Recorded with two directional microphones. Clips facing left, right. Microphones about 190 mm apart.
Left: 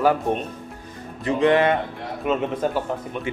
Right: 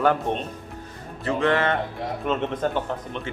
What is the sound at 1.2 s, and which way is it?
Speech, 15° left (ahead or behind).